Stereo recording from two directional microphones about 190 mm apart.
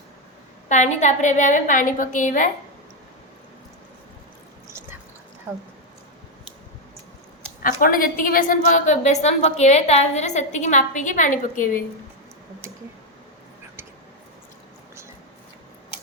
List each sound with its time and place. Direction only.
0.7 s a woman's voice: 40° left (ahead or behind)
5.5 s speech: 15° right (ahead or behind)
7.6 s a woman's voice: 50° left (ahead or behind)